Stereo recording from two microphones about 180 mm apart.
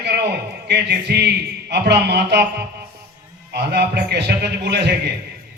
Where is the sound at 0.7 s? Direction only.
65° right (ahead or behind).